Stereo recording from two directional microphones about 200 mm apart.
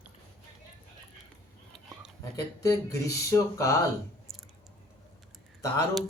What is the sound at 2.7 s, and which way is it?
Speech, 15° left (ahead or behind).